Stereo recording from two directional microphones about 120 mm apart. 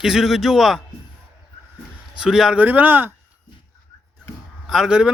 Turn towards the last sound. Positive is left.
turn(degrees=-5)  # may be behind; listen again after turning